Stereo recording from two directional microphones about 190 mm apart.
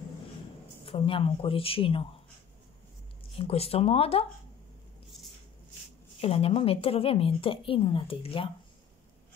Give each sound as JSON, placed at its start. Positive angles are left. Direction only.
{"t": 0.8, "sound": "a woman's voice", "side_deg": 30}
{"t": 3.3, "sound": "speech", "side_deg": 30}
{"t": 6.2, "sound": "a woman's voice", "side_deg": 30}